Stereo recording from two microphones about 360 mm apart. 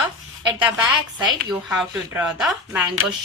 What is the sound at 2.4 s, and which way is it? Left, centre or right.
Speech, centre.